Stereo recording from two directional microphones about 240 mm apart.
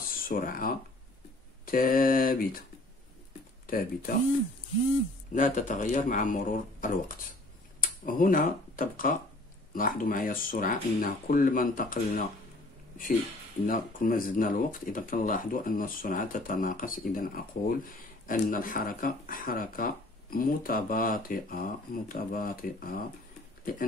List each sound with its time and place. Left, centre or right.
0.1 s speech: left
3.6 s speech: left
5.3 s speech: left
13.7 s speech: left